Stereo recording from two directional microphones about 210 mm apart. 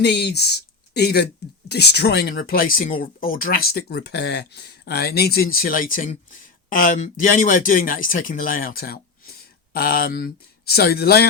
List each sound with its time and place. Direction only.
0.0 s speech: 55° left (ahead or behind)